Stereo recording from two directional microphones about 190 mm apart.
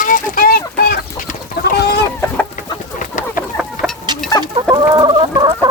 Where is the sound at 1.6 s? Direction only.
55° left (ahead or behind).